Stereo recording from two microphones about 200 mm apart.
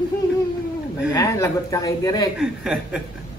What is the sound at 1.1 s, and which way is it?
A woman's voice, 15° left (ahead or behind).